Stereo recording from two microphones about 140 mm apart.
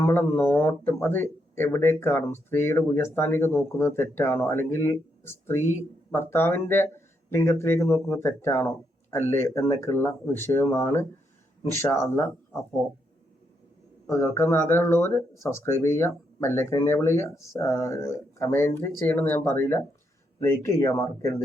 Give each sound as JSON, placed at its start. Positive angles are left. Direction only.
{"t": 0.0, "sound": "speech", "side_deg": 15}
{"t": 14.1, "sound": "speech", "side_deg": 20}